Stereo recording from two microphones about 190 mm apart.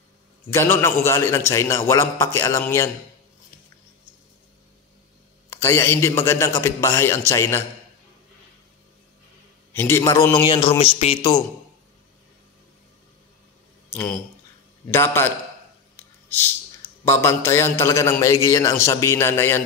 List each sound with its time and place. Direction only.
0.5 s a man's voice: 15° left (ahead or behind)
5.5 s a man's voice: 15° left (ahead or behind)
9.7 s a man's voice: 15° left (ahead or behind); by 11.3 s 30° left (ahead or behind)
13.9 s a man's voice: 5° left (ahead or behind)
16.3 s a sound: 10° left (ahead or behind)
17.0 s a man's voice: 15° left (ahead or behind)